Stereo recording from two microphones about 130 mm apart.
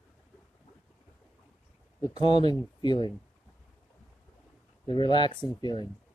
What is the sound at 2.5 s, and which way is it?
Speech, 35° left (ahead or behind).